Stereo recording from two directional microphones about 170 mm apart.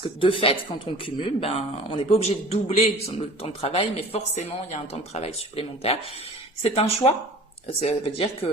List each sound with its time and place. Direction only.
0.0 s speech: 30° left (ahead or behind)